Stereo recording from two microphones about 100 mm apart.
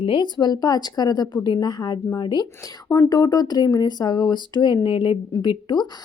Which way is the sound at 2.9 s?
35° left (ahead or behind).